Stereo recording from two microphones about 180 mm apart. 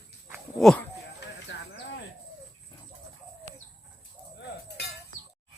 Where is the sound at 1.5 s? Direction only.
90° left.